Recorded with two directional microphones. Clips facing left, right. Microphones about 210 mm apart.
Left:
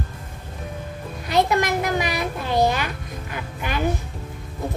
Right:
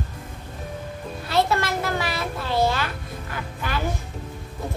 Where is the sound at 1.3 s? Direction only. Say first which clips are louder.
Left 3 dB; 15° left (ahead or behind).